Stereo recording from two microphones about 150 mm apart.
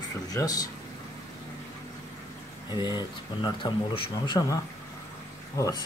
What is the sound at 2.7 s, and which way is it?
Speech, 30° left (ahead or behind).